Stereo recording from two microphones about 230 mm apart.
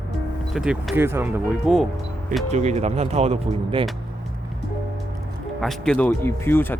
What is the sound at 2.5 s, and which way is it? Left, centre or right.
Speech, right.